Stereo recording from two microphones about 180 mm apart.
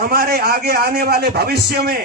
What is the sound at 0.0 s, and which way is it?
A man's voice, 55° right (ahead or behind).